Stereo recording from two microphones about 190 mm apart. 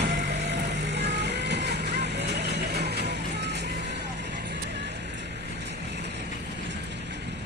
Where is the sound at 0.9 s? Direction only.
65° right (ahead or behind).